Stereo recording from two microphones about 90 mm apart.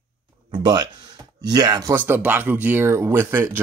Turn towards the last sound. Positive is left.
turn(degrees=-25)  # may be behind; listen again after turning